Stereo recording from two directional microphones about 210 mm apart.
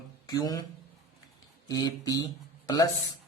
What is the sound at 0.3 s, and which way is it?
Speech, 20° left (ahead or behind).